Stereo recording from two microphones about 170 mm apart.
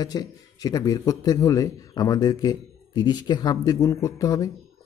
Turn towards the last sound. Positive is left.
turn(degrees=20)  # may be behind; listen again after turning